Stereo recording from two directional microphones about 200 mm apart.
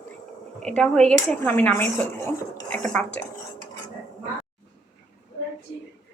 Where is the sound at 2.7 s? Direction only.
5° left (ahead or behind).